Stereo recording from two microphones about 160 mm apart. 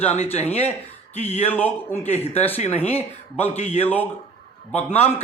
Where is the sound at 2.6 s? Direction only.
40° left (ahead or behind).